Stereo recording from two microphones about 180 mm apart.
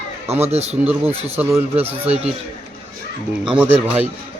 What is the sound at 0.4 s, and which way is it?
Speech, 35° right (ahead or behind).